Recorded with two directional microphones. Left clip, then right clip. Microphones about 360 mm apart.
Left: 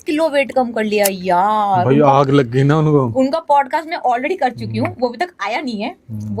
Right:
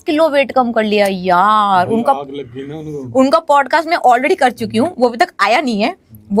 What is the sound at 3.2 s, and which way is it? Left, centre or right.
Speech, right.